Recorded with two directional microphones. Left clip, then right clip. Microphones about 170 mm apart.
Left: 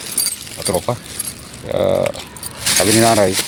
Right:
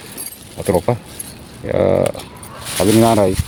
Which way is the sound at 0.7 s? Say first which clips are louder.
Right 3 dB; 50° right (ahead or behind).